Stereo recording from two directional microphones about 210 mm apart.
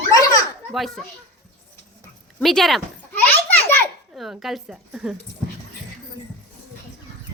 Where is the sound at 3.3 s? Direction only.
10° left (ahead or behind).